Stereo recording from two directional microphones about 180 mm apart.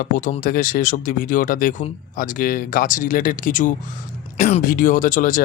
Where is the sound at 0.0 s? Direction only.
50° left (ahead or behind).